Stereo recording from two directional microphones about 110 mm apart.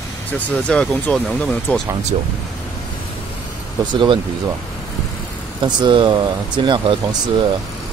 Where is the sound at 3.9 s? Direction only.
45° right (ahead or behind).